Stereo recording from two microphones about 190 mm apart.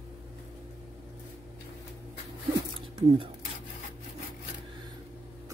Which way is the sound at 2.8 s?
30° right (ahead or behind).